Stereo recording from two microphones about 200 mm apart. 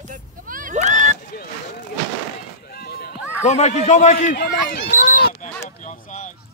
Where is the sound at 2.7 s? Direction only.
50° left (ahead or behind).